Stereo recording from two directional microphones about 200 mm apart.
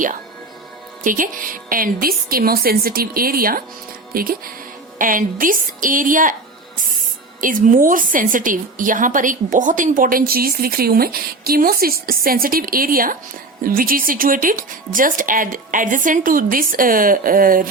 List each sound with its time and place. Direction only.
1.0 s a woman's voice: 45° right (ahead or behind)
7.4 s a woman's voice: 40° right (ahead or behind)